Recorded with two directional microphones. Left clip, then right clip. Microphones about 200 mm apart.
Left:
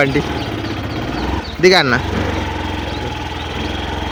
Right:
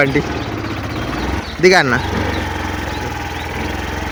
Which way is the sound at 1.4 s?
10° right (ahead or behind).